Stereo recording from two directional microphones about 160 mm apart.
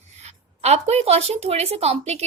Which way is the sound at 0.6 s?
40° right (ahead or behind).